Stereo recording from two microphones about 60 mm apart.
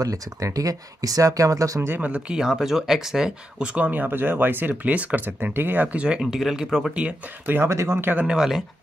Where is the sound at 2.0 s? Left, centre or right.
Right.